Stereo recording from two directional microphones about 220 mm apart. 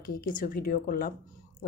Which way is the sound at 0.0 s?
40° left (ahead or behind).